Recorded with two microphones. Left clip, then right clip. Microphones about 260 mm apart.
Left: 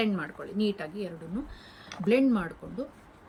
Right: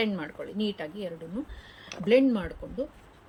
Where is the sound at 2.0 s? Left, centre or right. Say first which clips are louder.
Right 2 dB; centre.